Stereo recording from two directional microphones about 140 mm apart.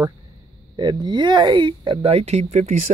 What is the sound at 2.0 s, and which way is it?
Speech, 50° right (ahead or behind).